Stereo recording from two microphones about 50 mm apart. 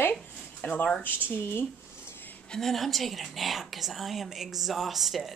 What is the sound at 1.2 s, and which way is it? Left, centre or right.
Speech, left.